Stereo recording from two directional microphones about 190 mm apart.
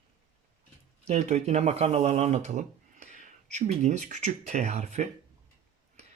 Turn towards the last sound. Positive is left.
turn(degrees=-35)  # may be behind; listen again after turning